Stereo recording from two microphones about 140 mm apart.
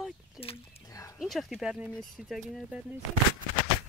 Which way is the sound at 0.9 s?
25° left (ahead or behind).